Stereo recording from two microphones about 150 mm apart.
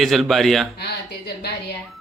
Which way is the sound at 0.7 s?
90° left.